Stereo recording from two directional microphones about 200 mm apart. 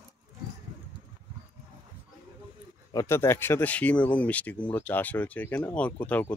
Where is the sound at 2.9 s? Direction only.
15° left (ahead or behind).